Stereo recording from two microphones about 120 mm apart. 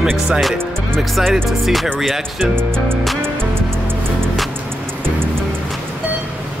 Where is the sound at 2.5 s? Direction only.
20° right (ahead or behind).